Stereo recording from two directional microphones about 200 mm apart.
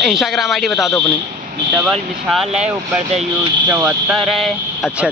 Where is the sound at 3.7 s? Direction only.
5° right (ahead or behind).